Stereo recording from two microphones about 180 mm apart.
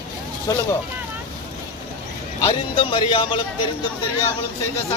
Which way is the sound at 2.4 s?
25° left (ahead or behind).